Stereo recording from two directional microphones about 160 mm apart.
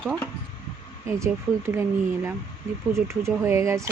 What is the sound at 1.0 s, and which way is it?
Speech, 15° right (ahead or behind).